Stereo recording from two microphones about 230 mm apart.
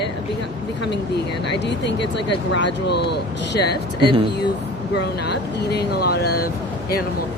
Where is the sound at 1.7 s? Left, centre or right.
Left.